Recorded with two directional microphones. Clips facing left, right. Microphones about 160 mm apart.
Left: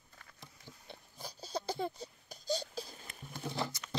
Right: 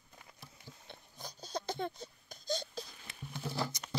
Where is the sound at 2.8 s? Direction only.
40° left (ahead or behind).